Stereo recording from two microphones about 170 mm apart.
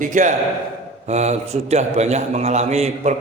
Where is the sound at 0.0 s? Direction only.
45° right (ahead or behind).